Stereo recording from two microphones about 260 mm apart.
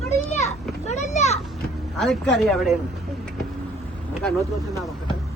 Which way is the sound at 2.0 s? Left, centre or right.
Centre.